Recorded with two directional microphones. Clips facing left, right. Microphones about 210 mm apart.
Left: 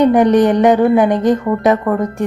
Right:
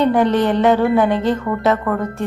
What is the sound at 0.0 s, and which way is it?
Speech, 15° left (ahead or behind).